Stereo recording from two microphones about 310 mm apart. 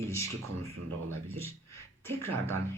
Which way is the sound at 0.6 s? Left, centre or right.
Right.